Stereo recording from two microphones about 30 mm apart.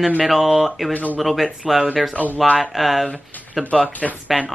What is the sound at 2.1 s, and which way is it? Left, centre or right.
Speech, left.